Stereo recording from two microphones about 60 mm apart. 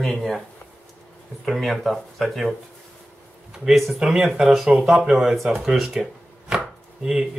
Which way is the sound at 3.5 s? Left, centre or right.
Centre.